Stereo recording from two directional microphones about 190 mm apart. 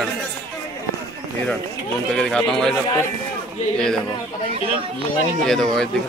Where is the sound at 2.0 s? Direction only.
5° left (ahead or behind).